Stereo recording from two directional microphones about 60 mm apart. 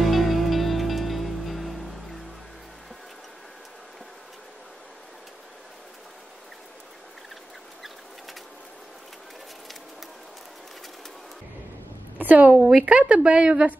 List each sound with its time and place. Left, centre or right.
0.0 s music: centre
12.2 s a woman's voice: right